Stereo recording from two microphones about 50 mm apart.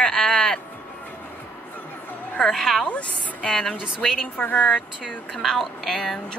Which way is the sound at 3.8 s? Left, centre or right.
Centre.